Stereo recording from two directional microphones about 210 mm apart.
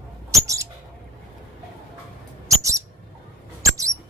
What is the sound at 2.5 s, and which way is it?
Owl, 15° right (ahead or behind).